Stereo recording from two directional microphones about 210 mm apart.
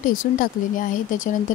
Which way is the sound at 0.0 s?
40° left (ahead or behind).